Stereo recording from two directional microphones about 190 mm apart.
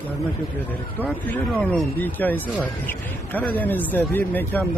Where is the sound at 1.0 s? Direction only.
10° left (ahead or behind).